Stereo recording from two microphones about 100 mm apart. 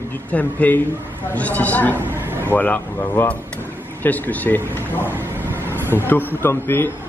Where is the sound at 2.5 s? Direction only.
15° left (ahead or behind).